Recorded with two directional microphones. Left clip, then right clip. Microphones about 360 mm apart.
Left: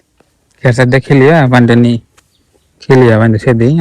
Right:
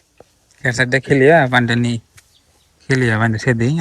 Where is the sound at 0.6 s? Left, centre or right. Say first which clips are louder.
Left 6 dB; left.